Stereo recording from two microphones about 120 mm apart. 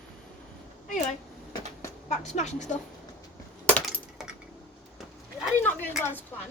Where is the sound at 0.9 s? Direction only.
90° left.